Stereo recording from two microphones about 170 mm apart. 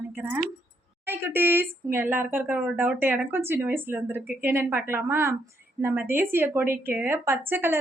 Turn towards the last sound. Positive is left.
turn(degrees=-10)  # may be behind; listen again after turning